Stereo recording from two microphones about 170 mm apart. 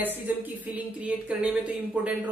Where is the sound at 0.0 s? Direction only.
10° right (ahead or behind).